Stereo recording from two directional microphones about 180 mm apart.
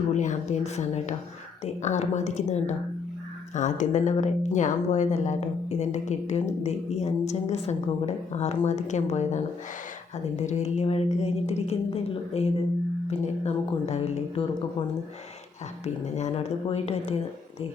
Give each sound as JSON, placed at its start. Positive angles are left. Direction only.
{"t": 0.1, "sound": "speech", "side_deg": 40}